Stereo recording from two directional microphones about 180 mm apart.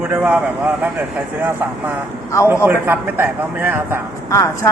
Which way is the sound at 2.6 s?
10° right (ahead or behind).